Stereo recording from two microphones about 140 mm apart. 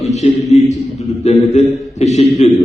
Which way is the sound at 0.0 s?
50° left (ahead or behind).